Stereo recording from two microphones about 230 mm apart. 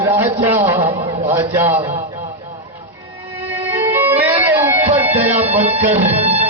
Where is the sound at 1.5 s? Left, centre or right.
Centre.